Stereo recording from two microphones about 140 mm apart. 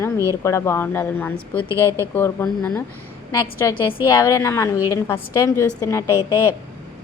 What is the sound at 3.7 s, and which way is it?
Speech, 35° left (ahead or behind).